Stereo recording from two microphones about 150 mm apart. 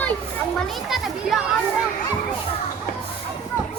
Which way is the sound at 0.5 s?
Centre (ahead or behind).